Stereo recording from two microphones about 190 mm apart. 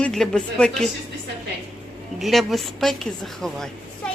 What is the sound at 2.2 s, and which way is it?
A man's voice, centre (ahead or behind).